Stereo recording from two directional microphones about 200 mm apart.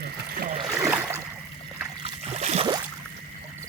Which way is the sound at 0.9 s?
15° right (ahead or behind).